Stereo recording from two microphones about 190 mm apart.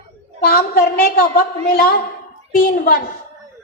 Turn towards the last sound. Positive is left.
turn(degrees=50)  # may be behind; listen again after turning